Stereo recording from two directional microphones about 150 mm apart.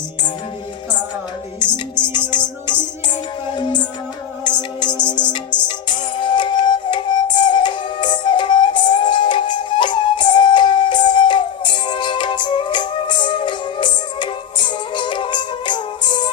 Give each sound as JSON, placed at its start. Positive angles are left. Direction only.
{"t": 1.5, "sound": "music", "side_deg": 30}
{"t": 3.5, "sound": "music", "side_deg": 30}